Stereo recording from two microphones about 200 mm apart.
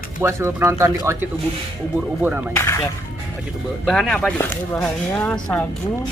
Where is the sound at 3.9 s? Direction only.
Centre (ahead or behind).